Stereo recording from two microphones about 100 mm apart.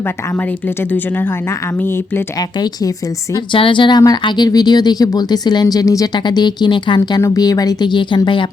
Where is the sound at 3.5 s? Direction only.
60° left (ahead or behind).